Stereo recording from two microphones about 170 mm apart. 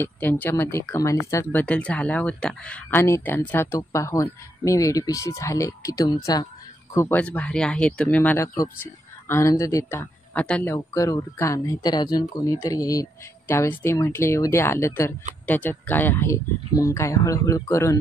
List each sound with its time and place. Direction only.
0.0 s speech: 10° left (ahead or behind)